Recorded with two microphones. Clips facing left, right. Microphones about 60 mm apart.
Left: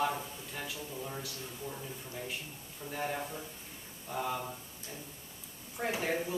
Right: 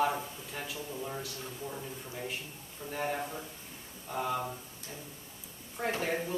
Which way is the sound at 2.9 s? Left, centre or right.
Centre.